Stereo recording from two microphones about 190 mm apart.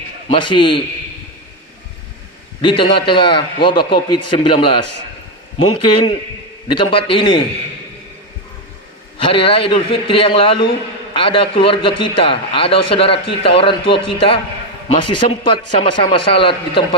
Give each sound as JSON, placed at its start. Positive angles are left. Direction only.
{"t": 0.3, "sound": "a man's voice", "side_deg": 25}
{"t": 2.6, "sound": "a man's voice", "side_deg": 25}
{"t": 9.1, "sound": "a man's voice", "side_deg": 30}